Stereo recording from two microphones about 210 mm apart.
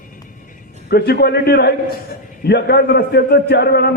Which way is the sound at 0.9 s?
50° left (ahead or behind).